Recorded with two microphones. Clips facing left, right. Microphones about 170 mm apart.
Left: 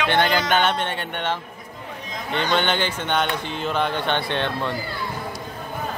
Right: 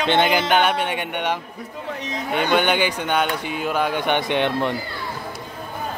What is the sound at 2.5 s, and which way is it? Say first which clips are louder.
Speech: right 4 dB; 10° right (ahead or behind).